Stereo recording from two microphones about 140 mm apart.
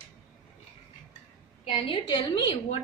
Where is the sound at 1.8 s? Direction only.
35° left (ahead or behind).